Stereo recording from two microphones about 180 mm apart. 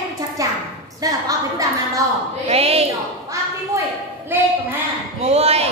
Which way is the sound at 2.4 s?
35° right (ahead or behind).